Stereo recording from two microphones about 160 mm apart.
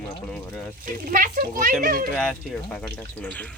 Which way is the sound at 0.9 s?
60° right (ahead or behind).